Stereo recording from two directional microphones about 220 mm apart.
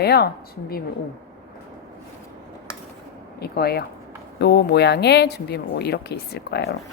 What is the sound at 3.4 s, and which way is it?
A woman's voice, 45° left (ahead or behind).